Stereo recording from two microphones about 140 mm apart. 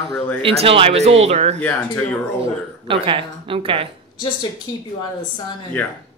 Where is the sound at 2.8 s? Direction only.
40° right (ahead or behind).